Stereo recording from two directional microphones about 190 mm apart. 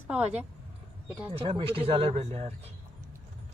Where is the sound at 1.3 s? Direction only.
30° right (ahead or behind).